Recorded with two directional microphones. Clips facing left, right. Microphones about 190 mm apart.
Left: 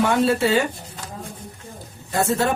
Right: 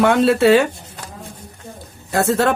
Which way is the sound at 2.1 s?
70° right (ahead or behind).